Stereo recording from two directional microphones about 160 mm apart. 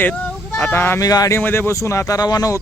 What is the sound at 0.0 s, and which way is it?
Speech, 10° left (ahead or behind).